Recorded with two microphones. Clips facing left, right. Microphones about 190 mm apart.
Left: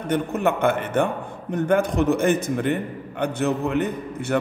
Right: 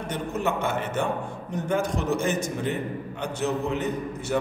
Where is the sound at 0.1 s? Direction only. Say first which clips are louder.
Left 6 dB; 55° left (ahead or behind).